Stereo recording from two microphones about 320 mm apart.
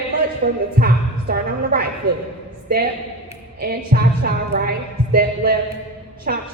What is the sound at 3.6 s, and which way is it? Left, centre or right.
Music, right.